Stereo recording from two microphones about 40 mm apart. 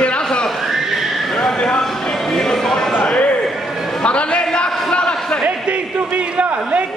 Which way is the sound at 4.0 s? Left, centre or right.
Left.